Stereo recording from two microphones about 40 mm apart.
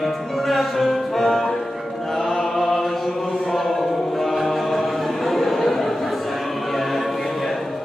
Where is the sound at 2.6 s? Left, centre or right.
Centre.